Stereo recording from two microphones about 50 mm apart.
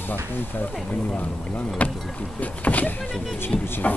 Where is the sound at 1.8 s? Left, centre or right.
Left.